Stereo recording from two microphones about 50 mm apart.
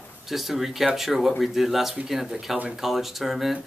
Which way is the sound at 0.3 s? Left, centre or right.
Centre.